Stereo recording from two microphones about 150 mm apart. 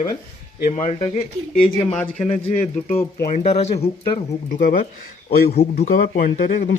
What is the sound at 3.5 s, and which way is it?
Speech, 45° left (ahead or behind).